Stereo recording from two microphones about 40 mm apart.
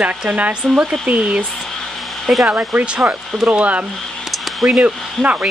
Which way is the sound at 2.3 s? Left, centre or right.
Centre.